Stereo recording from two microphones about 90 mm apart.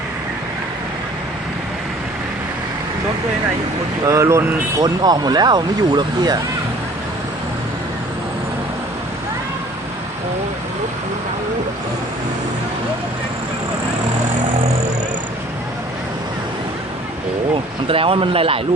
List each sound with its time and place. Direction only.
4.0 s speech: 35° right (ahead or behind)
4.8 s speech: 50° right (ahead or behind)
17.8 s speech: 90° right